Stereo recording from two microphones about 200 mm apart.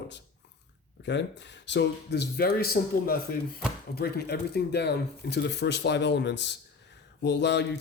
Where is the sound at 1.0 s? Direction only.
60° left (ahead or behind).